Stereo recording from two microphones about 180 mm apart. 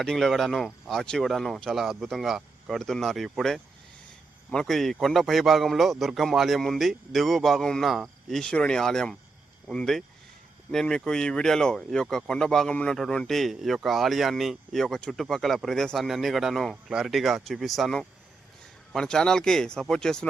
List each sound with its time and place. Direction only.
0.0 s speech: 5° left (ahead or behind)